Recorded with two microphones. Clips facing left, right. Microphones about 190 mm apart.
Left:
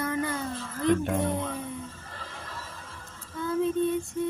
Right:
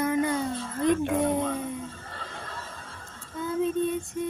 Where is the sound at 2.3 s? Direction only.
25° right (ahead or behind).